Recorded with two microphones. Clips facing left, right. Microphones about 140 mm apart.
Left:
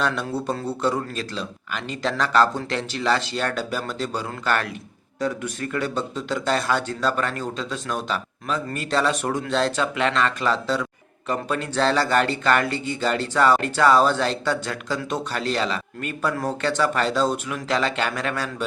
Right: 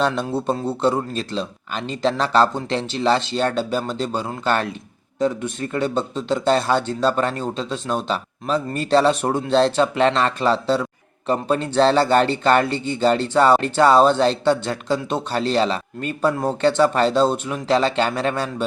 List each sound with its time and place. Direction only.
0.0 s speech: 25° right (ahead or behind)